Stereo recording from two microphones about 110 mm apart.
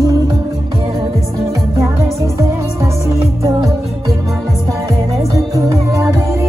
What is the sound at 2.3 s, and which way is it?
Music, 25° right (ahead or behind).